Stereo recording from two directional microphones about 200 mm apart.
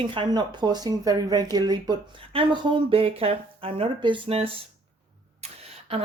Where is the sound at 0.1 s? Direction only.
25° right (ahead or behind).